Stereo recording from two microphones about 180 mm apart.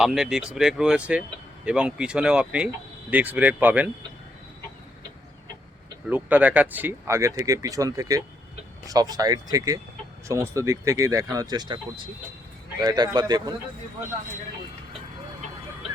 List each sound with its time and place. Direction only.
0.0 s speech: centre (ahead or behind)
6.1 s speech: 10° right (ahead or behind)